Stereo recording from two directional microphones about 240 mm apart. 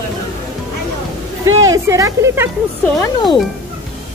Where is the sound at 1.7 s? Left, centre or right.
Centre.